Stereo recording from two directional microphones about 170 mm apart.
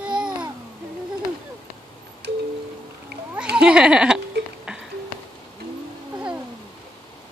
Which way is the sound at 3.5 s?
5° right (ahead or behind).